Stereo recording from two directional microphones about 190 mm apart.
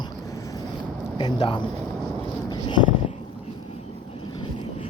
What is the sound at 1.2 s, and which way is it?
Speech, 25° left (ahead or behind).